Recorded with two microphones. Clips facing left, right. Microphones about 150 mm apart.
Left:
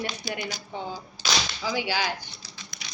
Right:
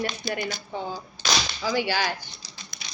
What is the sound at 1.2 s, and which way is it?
Whip, 10° left (ahead or behind).